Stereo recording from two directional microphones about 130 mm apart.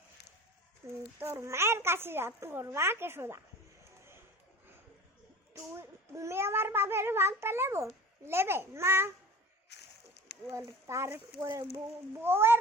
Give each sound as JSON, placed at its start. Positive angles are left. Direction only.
{"t": 0.8, "sound": "a woman's voice", "side_deg": -25}
{"t": 5.7, "sound": "a woman's voice", "side_deg": -20}
{"t": 10.8, "sound": "a woman's voice", "side_deg": -20}